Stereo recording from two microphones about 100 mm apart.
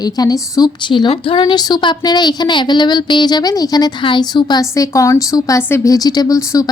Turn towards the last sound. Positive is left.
turn(degrees=35)  # may be behind; listen again after turning